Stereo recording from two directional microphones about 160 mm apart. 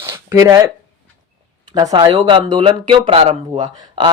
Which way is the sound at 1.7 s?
25° right (ahead or behind).